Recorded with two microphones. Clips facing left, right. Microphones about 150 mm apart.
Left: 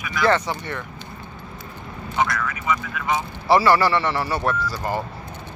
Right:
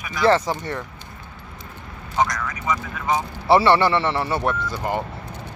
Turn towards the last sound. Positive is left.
turn(degrees=-20)  # may be behind; listen again after turning